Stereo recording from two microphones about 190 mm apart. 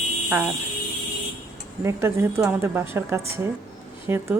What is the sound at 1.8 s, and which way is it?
Speech, 15° right (ahead or behind).